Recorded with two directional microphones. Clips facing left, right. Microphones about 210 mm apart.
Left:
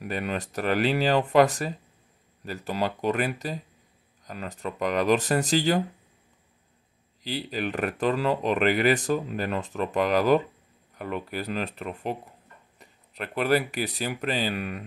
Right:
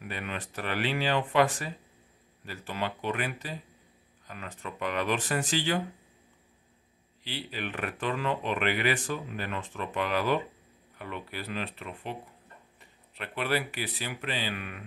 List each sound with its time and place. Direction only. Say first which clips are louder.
0.0 s speech: left 7 dB; 40° left (ahead or behind)
7.2 s speech: left 7 dB; 40° left (ahead or behind)